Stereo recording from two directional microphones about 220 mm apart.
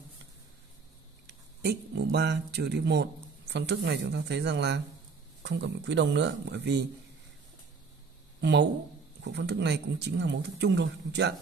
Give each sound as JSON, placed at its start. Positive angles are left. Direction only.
{"t": 1.2, "sound": "speech", "side_deg": -50}
{"t": 8.4, "sound": "speech", "side_deg": -50}